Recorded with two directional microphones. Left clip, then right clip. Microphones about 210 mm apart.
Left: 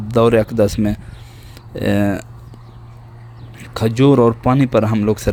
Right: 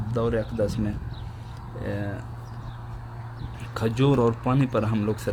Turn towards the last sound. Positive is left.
turn(degrees=30)  # may be behind; listen again after turning